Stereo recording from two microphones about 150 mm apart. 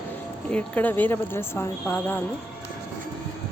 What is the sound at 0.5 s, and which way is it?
A woman's voice, 10° left (ahead or behind).